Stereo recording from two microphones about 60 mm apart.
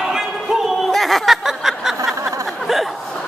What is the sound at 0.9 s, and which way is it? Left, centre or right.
Snicker, centre.